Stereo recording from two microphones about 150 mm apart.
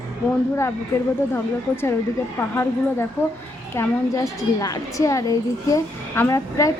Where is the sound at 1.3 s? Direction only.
15° left (ahead or behind).